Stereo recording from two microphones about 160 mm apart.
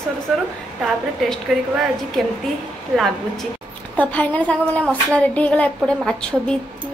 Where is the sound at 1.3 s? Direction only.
Centre (ahead or behind).